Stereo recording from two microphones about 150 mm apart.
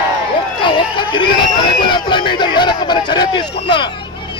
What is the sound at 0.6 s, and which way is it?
Speech, 35° left (ahead or behind).